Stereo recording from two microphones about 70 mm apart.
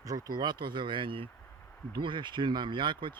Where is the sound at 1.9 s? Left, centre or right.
Right.